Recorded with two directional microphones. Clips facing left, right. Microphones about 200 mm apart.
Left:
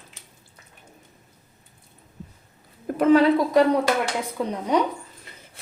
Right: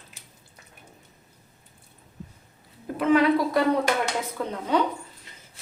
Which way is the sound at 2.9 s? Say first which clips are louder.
Left 6 dB; 50° left (ahead or behind).